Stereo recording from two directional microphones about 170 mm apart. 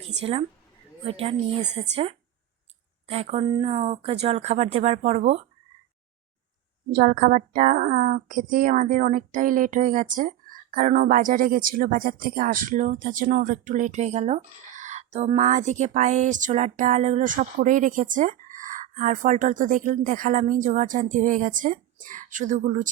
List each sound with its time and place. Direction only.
0.2 s speech: 35° right (ahead or behind)
6.9 s a woman's voice: 60° right (ahead or behind)